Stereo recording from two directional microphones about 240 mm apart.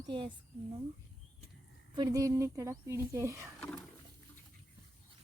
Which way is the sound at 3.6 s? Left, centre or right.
Centre.